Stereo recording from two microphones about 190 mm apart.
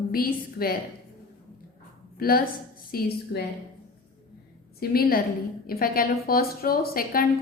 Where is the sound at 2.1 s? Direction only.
50° left (ahead or behind).